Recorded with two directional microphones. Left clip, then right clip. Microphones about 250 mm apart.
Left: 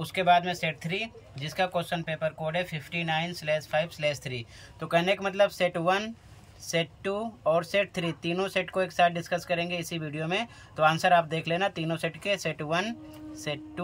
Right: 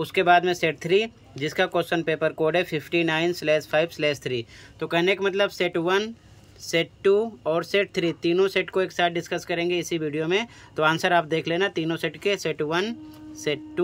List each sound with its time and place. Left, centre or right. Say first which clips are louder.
0.0 s speech: right 4 dB; centre